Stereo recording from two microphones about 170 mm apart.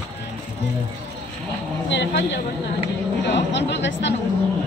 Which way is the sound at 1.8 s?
90° left.